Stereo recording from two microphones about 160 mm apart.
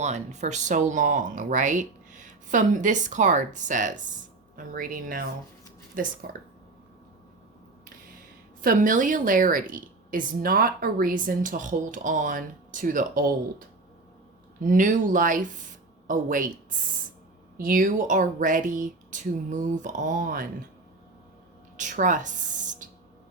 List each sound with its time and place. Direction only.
0.0 s speech: 45° right (ahead or behind)
6.2 s speech: 75° right (ahead or behind)
8.6 s a woman's voice: 55° right (ahead or behind)
14.6 s speech: 55° right (ahead or behind)
17.6 s speech: 60° right (ahead or behind)
21.8 s speech: 50° right (ahead or behind)